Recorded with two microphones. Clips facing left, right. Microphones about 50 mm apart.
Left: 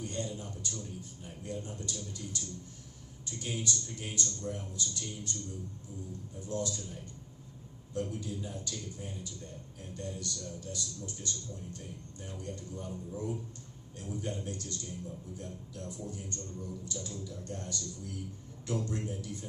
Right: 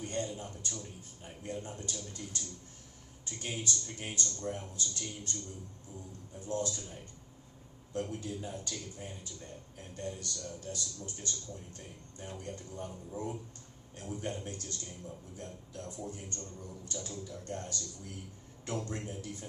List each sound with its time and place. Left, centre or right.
0.0 s a man's voice: right
6.4 s a man's voice: right
7.9 s a man's voice: right